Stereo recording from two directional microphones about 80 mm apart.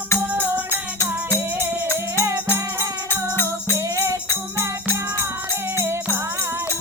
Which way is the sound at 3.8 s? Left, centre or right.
Right.